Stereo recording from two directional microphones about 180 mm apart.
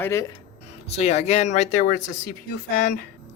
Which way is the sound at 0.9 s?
35° left (ahead or behind).